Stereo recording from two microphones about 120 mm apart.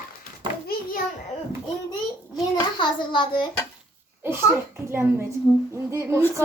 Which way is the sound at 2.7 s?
40° left (ahead or behind).